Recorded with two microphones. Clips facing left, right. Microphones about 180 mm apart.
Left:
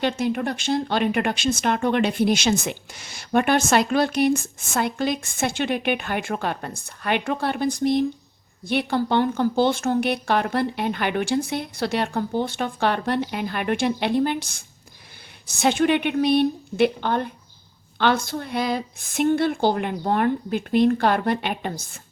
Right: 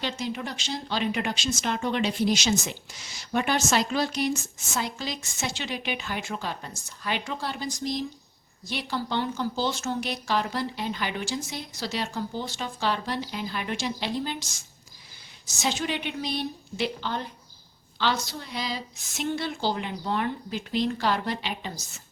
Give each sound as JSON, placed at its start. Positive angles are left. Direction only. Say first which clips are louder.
{"t": 0.0, "sound": "speech", "louder": "left 8 dB", "side_deg": 55}